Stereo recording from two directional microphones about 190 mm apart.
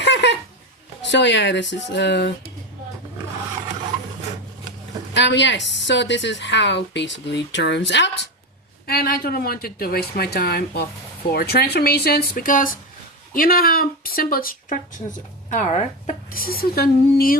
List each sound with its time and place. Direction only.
0.0 s a sound: 65° left (ahead or behind)
1.1 s a woman's voice: 70° left (ahead or behind)
5.1 s a woman's voice: 70° left (ahead or behind)
8.9 s a woman's voice: 55° left (ahead or behind)